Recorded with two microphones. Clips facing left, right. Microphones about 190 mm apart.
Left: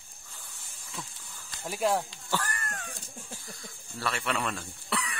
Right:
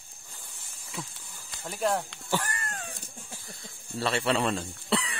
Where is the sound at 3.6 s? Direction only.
25° right (ahead or behind).